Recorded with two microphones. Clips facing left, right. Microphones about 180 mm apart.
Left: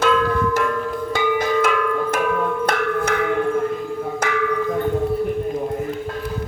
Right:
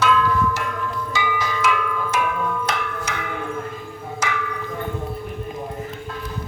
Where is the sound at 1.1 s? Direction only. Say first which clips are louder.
Left 8 dB; 55° left (ahead or behind).